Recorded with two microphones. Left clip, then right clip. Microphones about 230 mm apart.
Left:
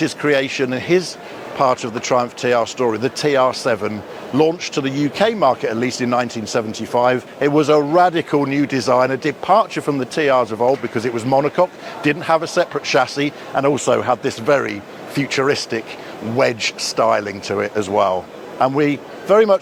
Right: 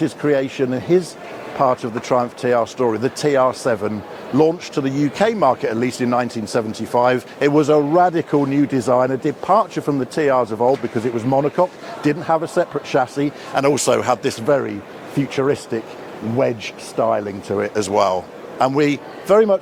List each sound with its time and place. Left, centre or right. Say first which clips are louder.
0.0 s speech: left 1 dB; left
7.7 s speech: left 3 dB; left
13.5 s speech: even; centre
14.4 s speech: left 3 dB; left
17.7 s a man's voice: even; centre